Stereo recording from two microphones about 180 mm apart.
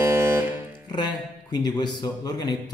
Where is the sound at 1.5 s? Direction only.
25° left (ahead or behind).